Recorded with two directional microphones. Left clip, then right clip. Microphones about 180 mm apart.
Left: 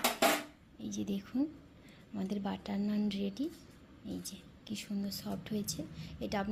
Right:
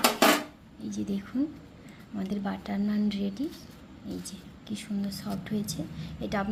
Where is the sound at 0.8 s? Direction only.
35° left (ahead or behind).